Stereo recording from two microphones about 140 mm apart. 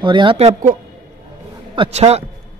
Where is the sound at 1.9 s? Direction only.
50° right (ahead or behind).